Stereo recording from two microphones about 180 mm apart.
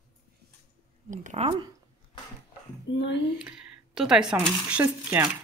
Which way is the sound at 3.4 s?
5° right (ahead or behind).